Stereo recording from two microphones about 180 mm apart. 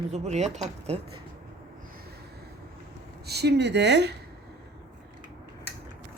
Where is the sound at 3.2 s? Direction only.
65° right (ahead or behind).